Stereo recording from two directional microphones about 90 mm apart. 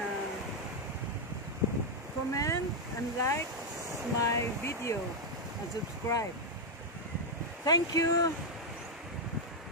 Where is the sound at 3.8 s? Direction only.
35° right (ahead or behind).